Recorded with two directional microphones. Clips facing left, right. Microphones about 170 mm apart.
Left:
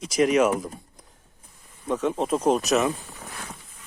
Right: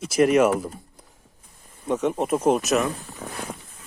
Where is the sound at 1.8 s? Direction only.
10° right (ahead or behind).